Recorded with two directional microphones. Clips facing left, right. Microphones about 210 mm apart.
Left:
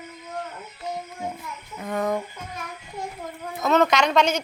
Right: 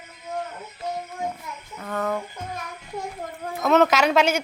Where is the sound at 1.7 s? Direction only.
15° left (ahead or behind).